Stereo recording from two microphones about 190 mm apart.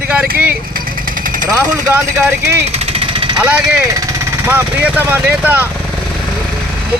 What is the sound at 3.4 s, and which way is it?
Speech, 5° right (ahead or behind).